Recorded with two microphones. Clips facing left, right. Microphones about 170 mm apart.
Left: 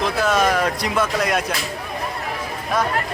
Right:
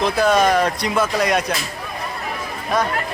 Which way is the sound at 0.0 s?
Centre (ahead or behind).